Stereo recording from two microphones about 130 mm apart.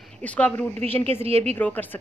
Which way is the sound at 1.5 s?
15° left (ahead or behind).